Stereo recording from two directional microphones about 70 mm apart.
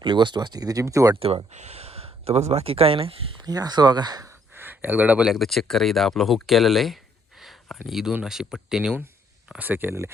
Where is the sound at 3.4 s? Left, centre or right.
Right.